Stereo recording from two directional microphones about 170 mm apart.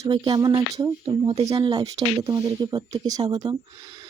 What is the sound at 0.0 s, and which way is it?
Speech, 25° right (ahead or behind).